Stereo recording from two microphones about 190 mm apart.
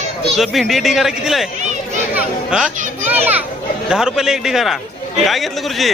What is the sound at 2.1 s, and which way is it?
Children playing, 5° right (ahead or behind).